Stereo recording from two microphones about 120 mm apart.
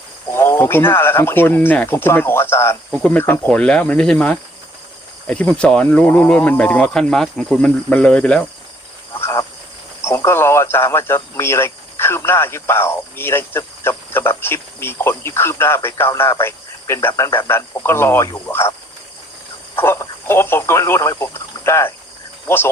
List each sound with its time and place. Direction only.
0.3 s speech: 20° left (ahead or behind)
9.2 s cricket: 25° left (ahead or behind)
10.0 s speech: 20° left (ahead or behind)
19.7 s speech: 20° left (ahead or behind)